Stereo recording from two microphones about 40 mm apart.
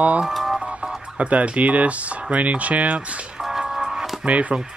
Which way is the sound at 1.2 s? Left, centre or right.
Right.